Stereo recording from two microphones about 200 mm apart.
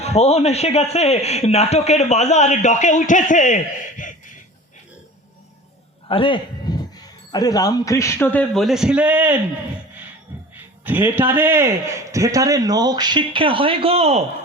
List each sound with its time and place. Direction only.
0.0 s a man's voice: 30° left (ahead or behind)
6.1 s speech: 25° left (ahead or behind); by 9.4 s 10° right (ahead or behind)
10.8 s a man's voice: 10° right (ahead or behind); by 14.3 s 30° right (ahead or behind)